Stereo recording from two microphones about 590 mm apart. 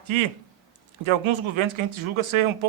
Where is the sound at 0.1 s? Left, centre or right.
Right.